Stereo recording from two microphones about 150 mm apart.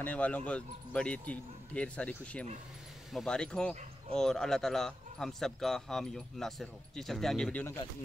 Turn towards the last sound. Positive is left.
turn(degrees=10)  # may be behind; listen again after turning